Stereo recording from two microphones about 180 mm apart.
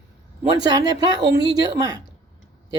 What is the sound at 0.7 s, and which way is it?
Speech, 20° right (ahead or behind).